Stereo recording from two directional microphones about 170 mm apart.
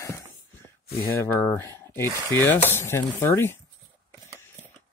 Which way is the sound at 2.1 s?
20° right (ahead or behind).